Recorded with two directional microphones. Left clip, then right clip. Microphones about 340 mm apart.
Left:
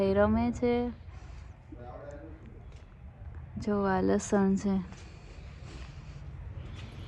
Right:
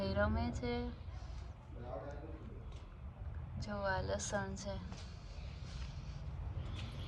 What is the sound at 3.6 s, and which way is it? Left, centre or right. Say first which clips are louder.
A woman's voice: left 10 dB; centre.